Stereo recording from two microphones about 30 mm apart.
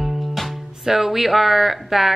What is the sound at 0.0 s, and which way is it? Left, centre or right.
Music, centre.